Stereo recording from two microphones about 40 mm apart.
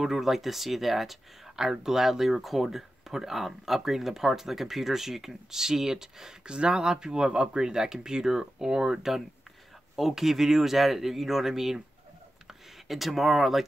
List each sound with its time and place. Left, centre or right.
0.0 s speech: centre
6.4 s speech: right
12.8 s speech: centre